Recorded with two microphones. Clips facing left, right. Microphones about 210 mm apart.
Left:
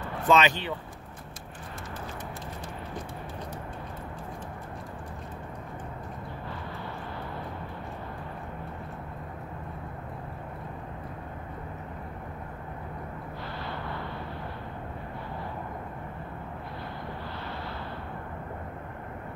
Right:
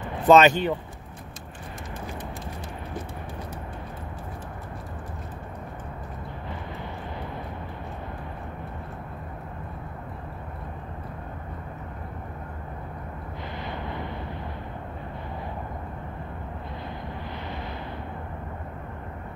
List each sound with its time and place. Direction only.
0.3 s speech: 50° right (ahead or behind)
13.7 s eruption: 20° right (ahead or behind)